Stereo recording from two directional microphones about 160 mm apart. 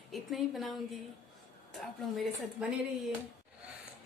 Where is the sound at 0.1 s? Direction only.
Centre (ahead or behind).